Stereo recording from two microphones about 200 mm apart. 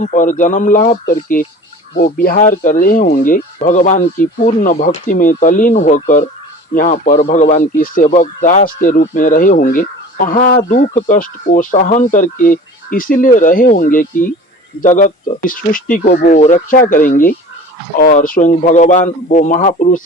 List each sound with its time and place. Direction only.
0.0 s speech: 40° left (ahead or behind)